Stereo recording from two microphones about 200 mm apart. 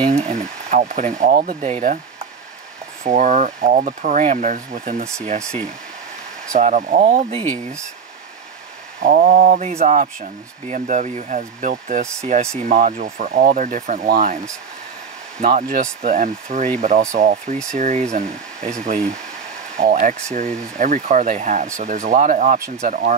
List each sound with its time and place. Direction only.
0.1 s speech: 35° right (ahead or behind)
6.5 s speech: 35° right (ahead or behind)
9.0 s speech: 40° right (ahead or behind)
15.4 s speech: 45° right (ahead or behind)